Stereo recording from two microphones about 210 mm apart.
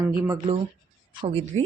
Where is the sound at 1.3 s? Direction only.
25° right (ahead or behind).